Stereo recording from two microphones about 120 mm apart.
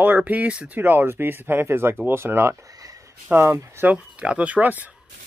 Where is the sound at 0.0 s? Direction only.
15° right (ahead or behind).